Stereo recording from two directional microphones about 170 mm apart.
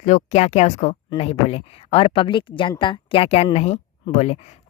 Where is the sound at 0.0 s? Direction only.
45° left (ahead or behind).